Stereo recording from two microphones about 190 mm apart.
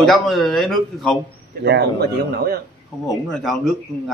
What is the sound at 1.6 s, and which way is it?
Speech, 60° right (ahead or behind).